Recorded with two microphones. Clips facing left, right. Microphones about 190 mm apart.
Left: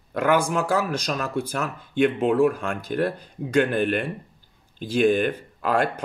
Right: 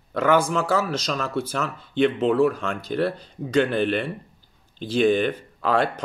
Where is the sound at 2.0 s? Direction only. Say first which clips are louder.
Even; 45° left (ahead or behind).